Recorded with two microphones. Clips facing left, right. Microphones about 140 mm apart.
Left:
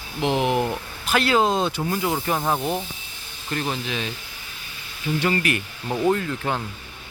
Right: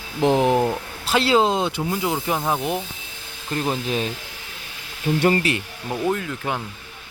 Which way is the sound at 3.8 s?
40° right (ahead or behind).